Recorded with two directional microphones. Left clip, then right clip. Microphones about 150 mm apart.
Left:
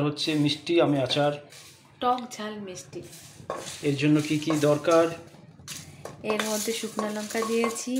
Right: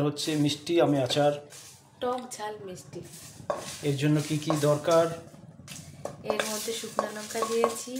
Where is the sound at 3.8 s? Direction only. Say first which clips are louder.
Left 4 dB; 5° left (ahead or behind).